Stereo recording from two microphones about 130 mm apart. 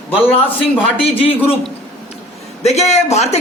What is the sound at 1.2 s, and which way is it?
Speech, 45° left (ahead or behind).